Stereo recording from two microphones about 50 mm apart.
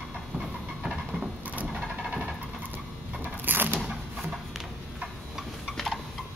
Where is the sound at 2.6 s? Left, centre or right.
Right.